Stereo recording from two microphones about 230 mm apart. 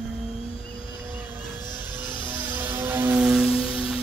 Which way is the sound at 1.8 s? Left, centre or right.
Centre.